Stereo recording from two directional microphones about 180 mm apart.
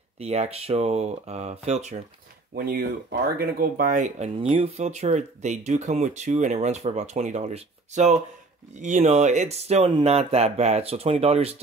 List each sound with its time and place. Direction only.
0.2 s speech: 35° right (ahead or behind)
2.5 s speech: 55° right (ahead or behind); by 11.5 s 35° right (ahead or behind)